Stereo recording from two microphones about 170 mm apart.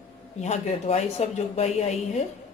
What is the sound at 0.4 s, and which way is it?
Speech, 40° left (ahead or behind).